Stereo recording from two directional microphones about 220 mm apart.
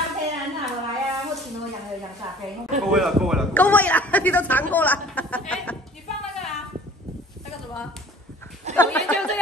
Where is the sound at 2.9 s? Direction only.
Centre (ahead or behind).